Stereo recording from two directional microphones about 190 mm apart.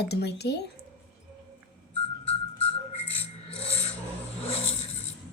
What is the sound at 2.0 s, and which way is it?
Rub, 30° left (ahead or behind).